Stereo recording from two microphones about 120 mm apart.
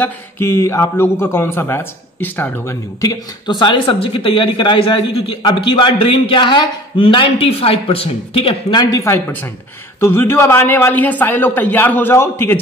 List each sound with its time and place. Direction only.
0.0 s a man's voice: 20° left (ahead or behind); by 8.7 s 50° left (ahead or behind)
8.7 s a man's voice: 25° left (ahead or behind)